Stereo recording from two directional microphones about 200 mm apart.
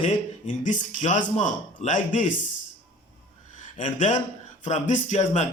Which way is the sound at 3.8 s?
35° left (ahead or behind).